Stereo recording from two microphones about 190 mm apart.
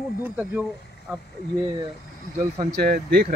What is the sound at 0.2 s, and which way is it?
Speech, 10° right (ahead or behind).